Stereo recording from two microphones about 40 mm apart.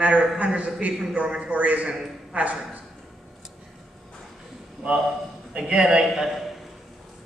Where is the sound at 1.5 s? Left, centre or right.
Right.